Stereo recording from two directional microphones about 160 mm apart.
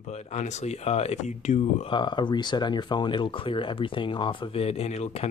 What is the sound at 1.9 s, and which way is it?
Speech, 30° left (ahead or behind).